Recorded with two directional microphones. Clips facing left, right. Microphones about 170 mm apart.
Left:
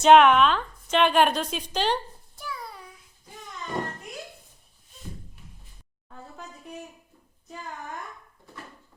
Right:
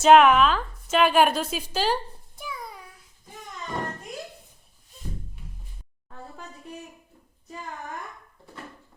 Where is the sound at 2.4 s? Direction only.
20° right (ahead or behind).